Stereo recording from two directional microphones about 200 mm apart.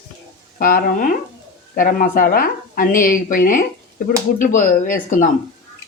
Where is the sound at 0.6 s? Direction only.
45° left (ahead or behind).